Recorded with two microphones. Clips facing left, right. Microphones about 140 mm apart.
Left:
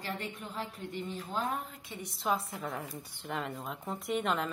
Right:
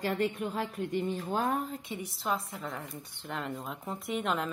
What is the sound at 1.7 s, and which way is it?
Speech, 25° right (ahead or behind).